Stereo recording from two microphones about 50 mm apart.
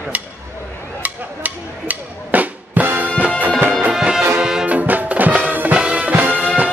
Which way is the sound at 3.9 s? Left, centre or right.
Centre.